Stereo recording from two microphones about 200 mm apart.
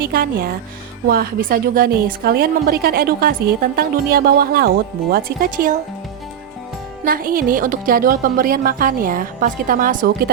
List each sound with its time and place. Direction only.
0.0 s a woman's voice: 50° right (ahead or behind)
7.0 s a woman's voice: 45° right (ahead or behind)